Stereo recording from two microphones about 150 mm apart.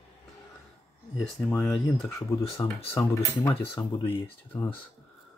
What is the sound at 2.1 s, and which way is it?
Speech, 20° left (ahead or behind).